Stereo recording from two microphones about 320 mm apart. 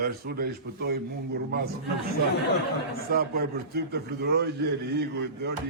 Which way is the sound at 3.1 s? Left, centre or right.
Right.